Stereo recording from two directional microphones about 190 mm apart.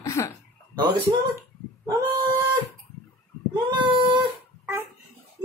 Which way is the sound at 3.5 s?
25° right (ahead or behind).